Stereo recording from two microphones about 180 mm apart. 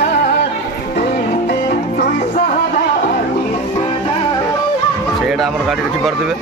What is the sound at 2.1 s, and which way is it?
Music, 45° left (ahead or behind).